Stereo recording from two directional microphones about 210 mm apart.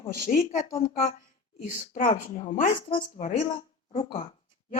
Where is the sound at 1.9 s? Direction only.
40° left (ahead or behind).